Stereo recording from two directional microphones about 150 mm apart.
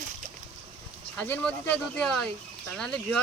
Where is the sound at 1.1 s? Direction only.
10° left (ahead or behind).